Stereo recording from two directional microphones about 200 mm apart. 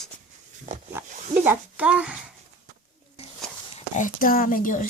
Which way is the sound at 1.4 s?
5° right (ahead or behind).